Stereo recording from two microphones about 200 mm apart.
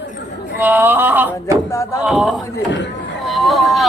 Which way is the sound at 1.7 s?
15° left (ahead or behind).